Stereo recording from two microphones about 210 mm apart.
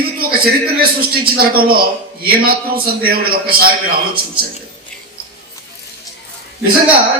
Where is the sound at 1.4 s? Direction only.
45° right (ahead or behind).